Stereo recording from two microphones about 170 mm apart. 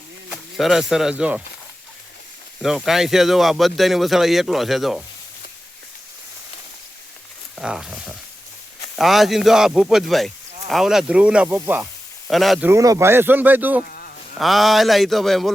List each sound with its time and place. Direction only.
0.3 s speech: centre (ahead or behind)
2.6 s speech: centre (ahead or behind)
7.5 s speech: 5° right (ahead or behind)
12.3 s speech: centre (ahead or behind)
12.6 s speech: 20° right (ahead or behind)
13.8 s a sound: 60° left (ahead or behind)
14.3 s speech: centre (ahead or behind)